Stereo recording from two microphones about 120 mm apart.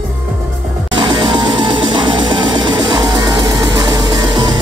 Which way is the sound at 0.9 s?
45° right (ahead or behind).